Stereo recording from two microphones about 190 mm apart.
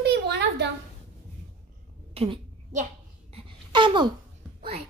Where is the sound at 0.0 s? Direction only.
60° right (ahead or behind).